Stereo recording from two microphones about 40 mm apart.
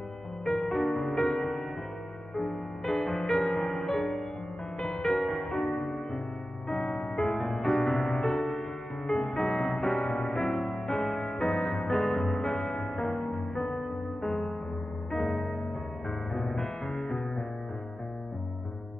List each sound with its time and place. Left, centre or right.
0.5 s music: centre
5.0 s music: centre